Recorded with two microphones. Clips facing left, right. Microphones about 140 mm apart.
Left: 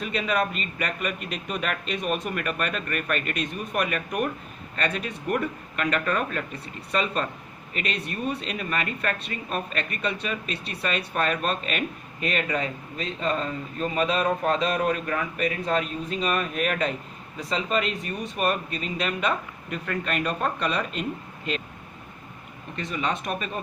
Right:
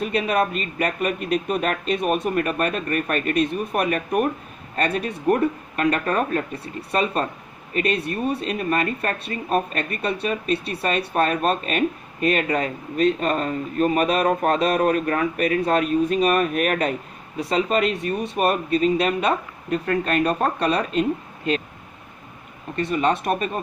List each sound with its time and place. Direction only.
0.0 s speech: 45° right (ahead or behind)
13.0 s speech: 55° right (ahead or behind); by 21.0 s 40° right (ahead or behind)
22.7 s speech: 50° right (ahead or behind)